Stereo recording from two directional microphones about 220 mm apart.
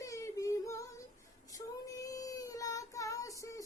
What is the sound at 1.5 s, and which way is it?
Child singing, 15° left (ahead or behind).